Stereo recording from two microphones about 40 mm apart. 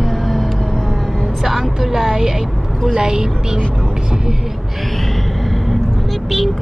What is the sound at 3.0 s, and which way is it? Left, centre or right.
Speech, centre.